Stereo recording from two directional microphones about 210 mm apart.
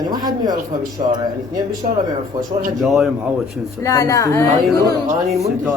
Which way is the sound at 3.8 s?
15° left (ahead or behind).